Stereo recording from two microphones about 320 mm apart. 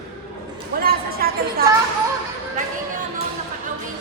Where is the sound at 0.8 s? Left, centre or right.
Right.